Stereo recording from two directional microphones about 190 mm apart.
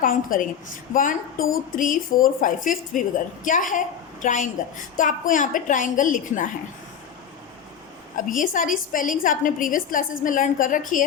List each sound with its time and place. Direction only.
0.0 s a woman's voice: 45° left (ahead or behind)
8.3 s a woman's voice: 45° left (ahead or behind)